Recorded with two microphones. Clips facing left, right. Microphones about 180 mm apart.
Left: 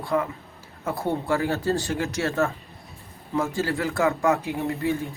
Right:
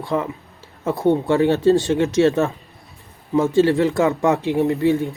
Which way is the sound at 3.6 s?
25° right (ahead or behind).